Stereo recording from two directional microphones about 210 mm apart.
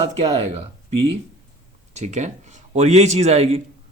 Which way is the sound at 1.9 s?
35° right (ahead or behind).